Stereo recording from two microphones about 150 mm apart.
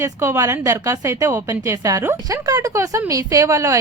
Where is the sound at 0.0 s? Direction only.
20° right (ahead or behind).